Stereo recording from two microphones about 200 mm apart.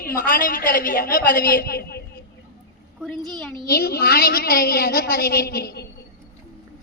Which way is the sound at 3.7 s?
50° left (ahead or behind).